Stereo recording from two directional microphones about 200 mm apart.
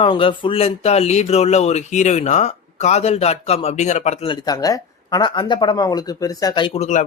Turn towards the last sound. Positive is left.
turn(degrees=35)  # may be behind; listen again after turning